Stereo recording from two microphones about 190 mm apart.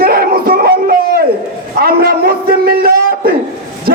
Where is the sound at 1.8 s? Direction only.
55° right (ahead or behind).